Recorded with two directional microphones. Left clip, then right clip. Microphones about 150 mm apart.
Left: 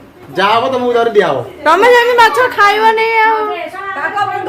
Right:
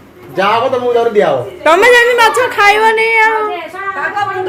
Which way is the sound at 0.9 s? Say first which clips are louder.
Left 1 dB; 35° left (ahead or behind).